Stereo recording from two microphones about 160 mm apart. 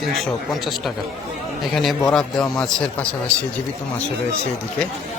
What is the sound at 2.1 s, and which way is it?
Speech, 5° left (ahead or behind).